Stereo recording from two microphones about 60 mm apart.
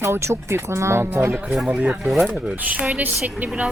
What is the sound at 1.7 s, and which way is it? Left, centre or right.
Speech, right.